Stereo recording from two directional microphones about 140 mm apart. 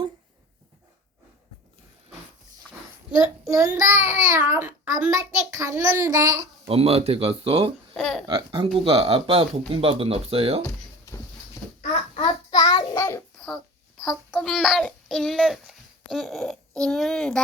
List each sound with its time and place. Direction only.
3.4 s a child's voice: 25° right (ahead or behind)
6.7 s speech: 45° right (ahead or behind)
7.9 s speech: centre (ahead or behind)
8.3 s speech: 40° right (ahead or behind)
12.2 s child singing: 30° left (ahead or behind)
14.4 s speech: centre (ahead or behind)